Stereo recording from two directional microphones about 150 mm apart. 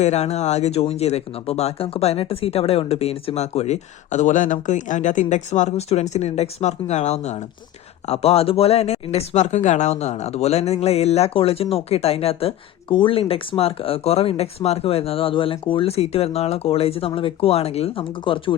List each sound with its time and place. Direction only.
0.0 s speech: 45° left (ahead or behind)